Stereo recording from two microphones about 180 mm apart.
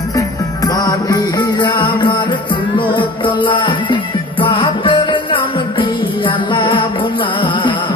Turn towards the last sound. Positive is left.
turn(degrees=25)  # may be behind; listen again after turning